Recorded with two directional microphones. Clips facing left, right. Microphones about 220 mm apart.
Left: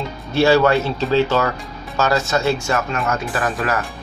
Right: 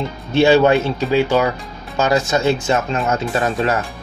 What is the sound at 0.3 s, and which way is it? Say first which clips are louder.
Speech: right 2 dB; 20° right (ahead or behind).